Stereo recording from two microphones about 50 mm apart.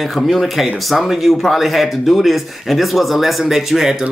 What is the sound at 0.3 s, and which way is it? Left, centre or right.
Speech, centre.